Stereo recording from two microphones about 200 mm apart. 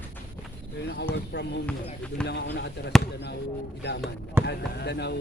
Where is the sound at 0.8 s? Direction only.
55° left (ahead or behind).